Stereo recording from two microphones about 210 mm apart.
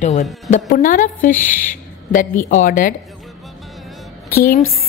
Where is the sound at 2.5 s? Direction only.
40° left (ahead or behind).